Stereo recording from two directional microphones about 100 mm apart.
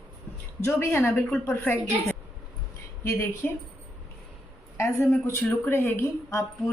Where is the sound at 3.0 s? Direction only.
25° left (ahead or behind).